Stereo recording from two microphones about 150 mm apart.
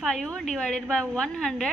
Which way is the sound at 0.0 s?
5° left (ahead or behind).